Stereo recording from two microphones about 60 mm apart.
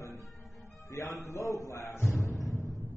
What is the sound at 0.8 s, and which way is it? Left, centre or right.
A man's voice, left.